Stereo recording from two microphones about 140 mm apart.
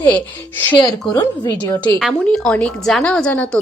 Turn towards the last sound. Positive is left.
turn(degrees=10)  # may be behind; listen again after turning